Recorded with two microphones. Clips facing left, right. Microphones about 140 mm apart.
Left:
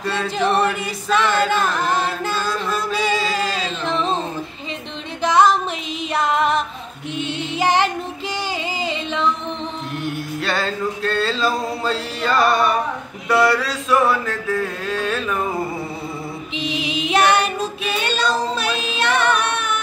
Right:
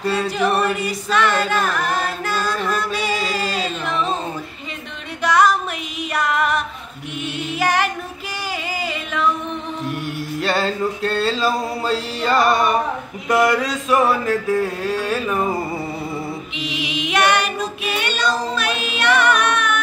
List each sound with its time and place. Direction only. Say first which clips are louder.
0.5 s female singing: even; 30° left (ahead or behind)
1.6 s chant: left 1 dB; 30° left (ahead or behind)
2.3 s music: right 1 dB; centre (ahead or behind)
3.8 s a sound: left 3 dB; 30° left (ahead or behind)
5.2 s music: left 1 dB; 25° left (ahead or behind)
6.1 s female singing: left 2 dB; 30° left (ahead or behind)
10.4 s male singing: right 3 dB; 10° right (ahead or behind)
16.5 s child singing: left 5 dB; 35° left (ahead or behind)